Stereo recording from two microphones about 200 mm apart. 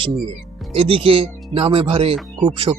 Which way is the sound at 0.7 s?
25° right (ahead or behind).